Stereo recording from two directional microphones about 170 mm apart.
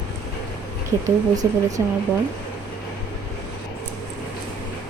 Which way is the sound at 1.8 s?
20° right (ahead or behind).